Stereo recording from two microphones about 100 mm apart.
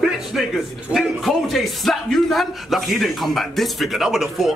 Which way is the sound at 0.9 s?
Centre (ahead or behind).